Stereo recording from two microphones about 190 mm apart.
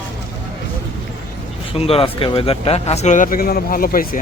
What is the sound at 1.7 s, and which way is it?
Speech, 30° left (ahead or behind).